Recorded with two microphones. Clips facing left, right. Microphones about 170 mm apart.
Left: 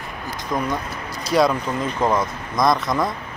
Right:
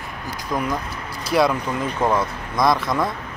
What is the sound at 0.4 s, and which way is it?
Speech, 5° right (ahead or behind).